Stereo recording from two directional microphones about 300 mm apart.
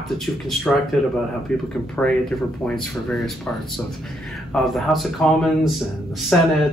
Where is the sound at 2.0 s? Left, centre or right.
Centre.